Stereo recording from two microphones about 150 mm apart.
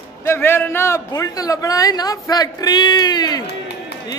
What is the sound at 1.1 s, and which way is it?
A man's voice, 25° left (ahead or behind).